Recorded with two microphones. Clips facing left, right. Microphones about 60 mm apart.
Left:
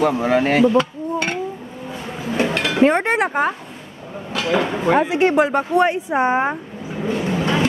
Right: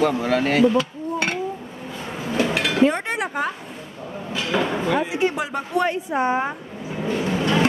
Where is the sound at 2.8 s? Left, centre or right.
Left.